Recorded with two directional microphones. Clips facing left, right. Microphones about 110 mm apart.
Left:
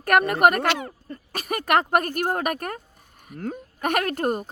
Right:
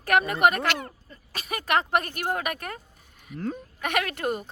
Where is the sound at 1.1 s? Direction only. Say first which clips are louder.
Left 6 dB; 50° left (ahead or behind).